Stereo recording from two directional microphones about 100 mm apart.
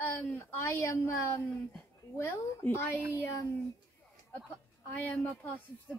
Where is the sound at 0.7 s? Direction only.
30° left (ahead or behind).